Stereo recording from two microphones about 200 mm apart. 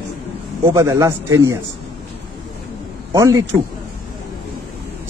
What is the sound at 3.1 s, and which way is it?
Speech, 15° right (ahead or behind).